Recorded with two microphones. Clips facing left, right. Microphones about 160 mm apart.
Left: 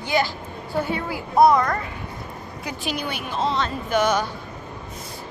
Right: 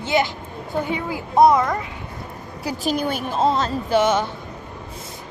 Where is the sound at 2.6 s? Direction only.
40° right (ahead or behind); by 4.3 s 25° right (ahead or behind).